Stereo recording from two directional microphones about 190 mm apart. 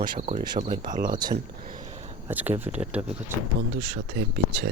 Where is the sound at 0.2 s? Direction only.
35° right (ahead or behind).